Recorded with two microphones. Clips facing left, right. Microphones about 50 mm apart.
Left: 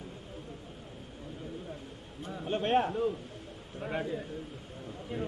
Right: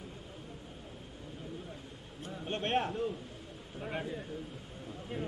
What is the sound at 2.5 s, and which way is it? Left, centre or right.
Speech, centre.